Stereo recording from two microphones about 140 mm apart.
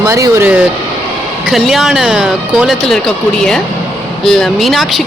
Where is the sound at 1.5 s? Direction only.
Centre (ahead or behind).